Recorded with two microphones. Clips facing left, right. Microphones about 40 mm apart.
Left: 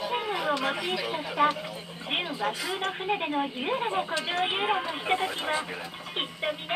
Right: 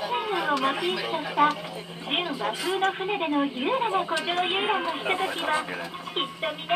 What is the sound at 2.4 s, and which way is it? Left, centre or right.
Speech, centre.